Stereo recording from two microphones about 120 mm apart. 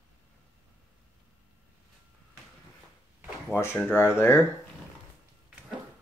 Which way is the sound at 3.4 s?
20° left (ahead or behind).